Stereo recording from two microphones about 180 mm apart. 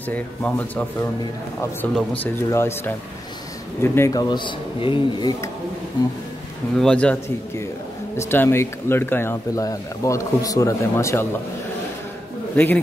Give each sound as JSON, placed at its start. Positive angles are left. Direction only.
{"t": 0.1, "sound": "speech", "side_deg": 10}
{"t": 6.8, "sound": "speech", "side_deg": 5}
{"t": 12.5, "sound": "speech", "side_deg": 10}